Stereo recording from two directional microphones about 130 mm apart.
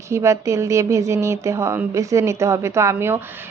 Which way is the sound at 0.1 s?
20° right (ahead or behind).